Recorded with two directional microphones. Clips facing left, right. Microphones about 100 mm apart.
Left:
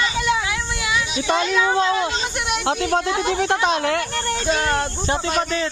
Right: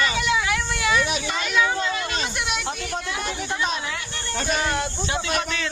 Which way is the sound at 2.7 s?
80° left.